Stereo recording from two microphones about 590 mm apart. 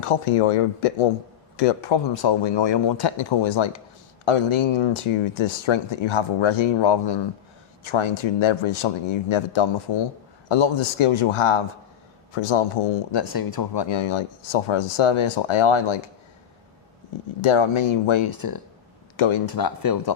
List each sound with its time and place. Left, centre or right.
0.0 s speech: left
2.2 s speech: left
13.1 s speech: left
17.4 s speech: left
19.5 s speech: left